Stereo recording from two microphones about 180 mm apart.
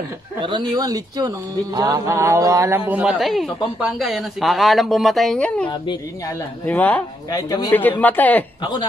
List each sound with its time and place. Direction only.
0.4 s speech: 25° right (ahead or behind); by 5.7 s 5° left (ahead or behind)
5.7 s speech: 25° left (ahead or behind)
6.6 s speech: 10° left (ahead or behind)
7.2 s speech: 20° left (ahead or behind)
8.0 s speech: 10° left (ahead or behind)